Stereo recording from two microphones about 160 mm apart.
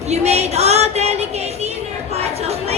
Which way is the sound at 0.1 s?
40° right (ahead or behind).